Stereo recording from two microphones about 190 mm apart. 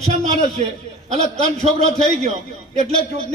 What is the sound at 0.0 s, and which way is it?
Speech, 35° right (ahead or behind).